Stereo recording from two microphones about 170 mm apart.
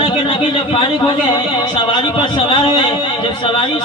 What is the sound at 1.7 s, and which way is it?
A man's voice, 30° left (ahead or behind).